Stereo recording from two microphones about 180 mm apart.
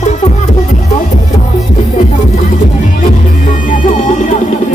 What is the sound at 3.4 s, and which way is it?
Music, 45° left (ahead or behind).